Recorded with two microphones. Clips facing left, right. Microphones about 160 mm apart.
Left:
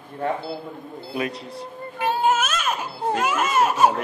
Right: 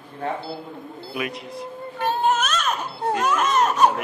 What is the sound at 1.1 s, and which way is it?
Speech, 30° left (ahead or behind).